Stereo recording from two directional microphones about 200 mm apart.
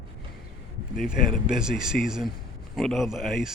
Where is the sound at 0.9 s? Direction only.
Centre (ahead or behind).